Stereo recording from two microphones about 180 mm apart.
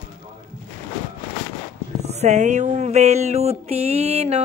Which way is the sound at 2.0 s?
35° right (ahead or behind).